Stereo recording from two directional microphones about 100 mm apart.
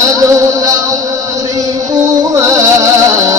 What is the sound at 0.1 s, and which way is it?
Music, 35° right (ahead or behind).